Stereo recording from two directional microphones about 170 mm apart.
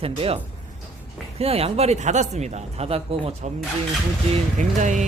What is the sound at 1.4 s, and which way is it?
Speech, 35° right (ahead or behind).